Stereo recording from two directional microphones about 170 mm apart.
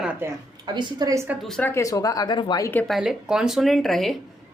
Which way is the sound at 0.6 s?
25° right (ahead or behind).